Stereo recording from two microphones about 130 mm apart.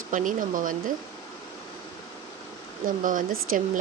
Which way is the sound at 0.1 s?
90° right.